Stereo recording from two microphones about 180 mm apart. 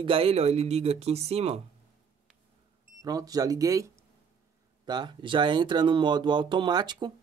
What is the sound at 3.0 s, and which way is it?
Speech, 20° right (ahead or behind).